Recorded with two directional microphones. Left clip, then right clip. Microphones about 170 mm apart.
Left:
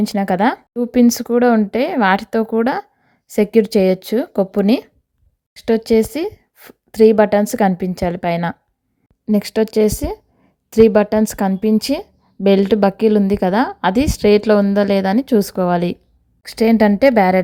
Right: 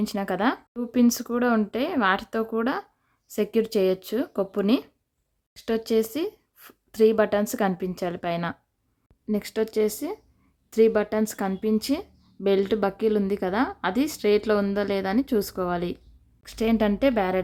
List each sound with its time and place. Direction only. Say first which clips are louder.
0.0 s a woman's voice: left 9 dB; 30° left (ahead or behind)